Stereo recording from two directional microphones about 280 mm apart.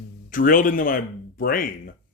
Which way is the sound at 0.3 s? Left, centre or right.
Left.